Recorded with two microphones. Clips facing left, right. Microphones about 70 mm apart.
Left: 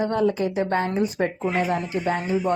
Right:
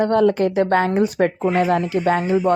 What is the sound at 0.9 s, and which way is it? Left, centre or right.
Speech, right.